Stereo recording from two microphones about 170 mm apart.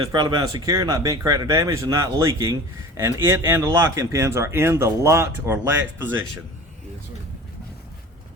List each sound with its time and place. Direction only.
0.1 s speech: 25° right (ahead or behind)